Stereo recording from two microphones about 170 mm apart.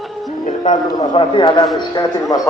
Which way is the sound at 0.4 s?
45° left (ahead or behind).